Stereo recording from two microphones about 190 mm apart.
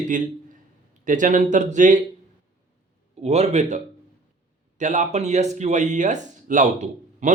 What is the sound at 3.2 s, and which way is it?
Speech, 35° right (ahead or behind).